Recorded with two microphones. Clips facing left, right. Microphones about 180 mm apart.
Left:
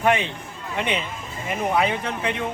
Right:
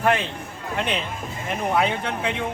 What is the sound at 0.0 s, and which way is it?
A man's voice, centre (ahead or behind).